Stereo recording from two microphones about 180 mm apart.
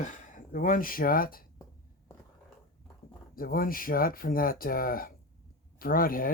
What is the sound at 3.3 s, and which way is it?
Speech, 50° left (ahead or behind).